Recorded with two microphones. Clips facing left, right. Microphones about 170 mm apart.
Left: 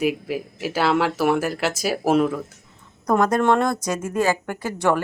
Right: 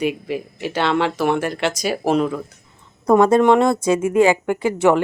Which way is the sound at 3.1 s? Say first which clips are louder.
Right 5 dB; 25° right (ahead or behind).